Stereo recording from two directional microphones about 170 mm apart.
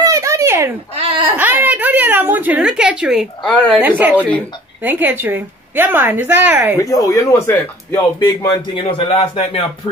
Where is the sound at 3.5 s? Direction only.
5° left (ahead or behind).